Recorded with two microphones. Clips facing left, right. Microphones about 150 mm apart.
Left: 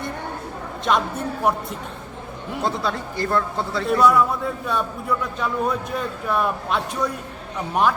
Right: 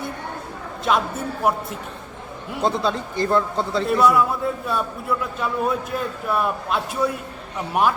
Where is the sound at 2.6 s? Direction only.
20° right (ahead or behind).